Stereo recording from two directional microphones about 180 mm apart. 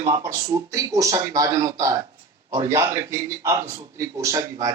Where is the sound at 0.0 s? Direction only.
15° right (ahead or behind).